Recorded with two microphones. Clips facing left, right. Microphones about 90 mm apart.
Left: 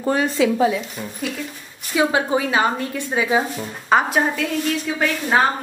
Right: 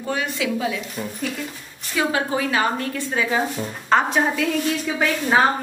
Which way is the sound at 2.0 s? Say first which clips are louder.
Left 3 dB; 20° left (ahead or behind).